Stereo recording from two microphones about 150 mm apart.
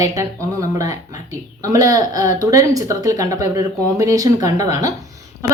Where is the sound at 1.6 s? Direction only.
20° right (ahead or behind).